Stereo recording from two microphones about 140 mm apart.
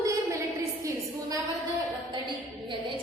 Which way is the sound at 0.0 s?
20° right (ahead or behind).